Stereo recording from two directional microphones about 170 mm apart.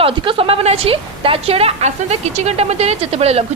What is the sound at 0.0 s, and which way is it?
A woman's voice, 30° right (ahead or behind).